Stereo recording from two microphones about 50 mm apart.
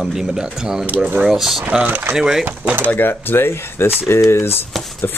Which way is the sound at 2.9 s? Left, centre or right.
Left.